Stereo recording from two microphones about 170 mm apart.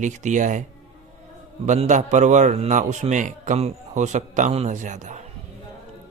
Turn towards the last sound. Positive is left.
turn(degrees=-45)  # may be behind; listen again after turning